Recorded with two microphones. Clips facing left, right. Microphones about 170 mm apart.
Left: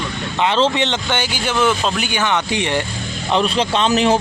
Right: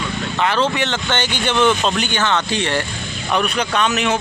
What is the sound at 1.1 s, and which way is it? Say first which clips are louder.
Speech: right 1 dB; 10° left (ahead or behind).